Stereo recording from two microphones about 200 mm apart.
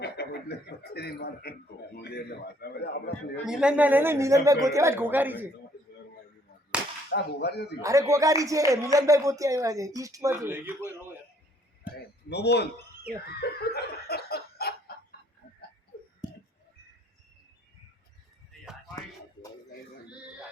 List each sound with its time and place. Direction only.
0.0 s speech: 55° left (ahead or behind)
3.4 s speech: 5° right (ahead or behind)
7.1 s speech: 55° left (ahead or behind)
7.8 s speech: 15° right (ahead or behind)
12.3 s speech: 55° left (ahead or behind)
13.4 s a sound: 50° left (ahead or behind)